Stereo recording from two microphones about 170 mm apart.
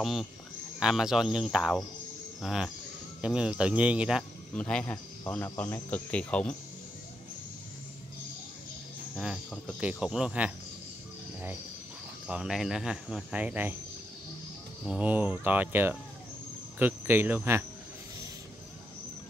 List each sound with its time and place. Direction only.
0.0 s speech: centre (ahead or behind)
4.6 s speech: 5° left (ahead or behind)
9.1 s speech: centre (ahead or behind)
12.3 s speech: 5° right (ahead or behind)
14.9 s speech: 10° right (ahead or behind)